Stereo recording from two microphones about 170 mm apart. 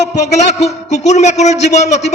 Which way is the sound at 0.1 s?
40° left (ahead or behind).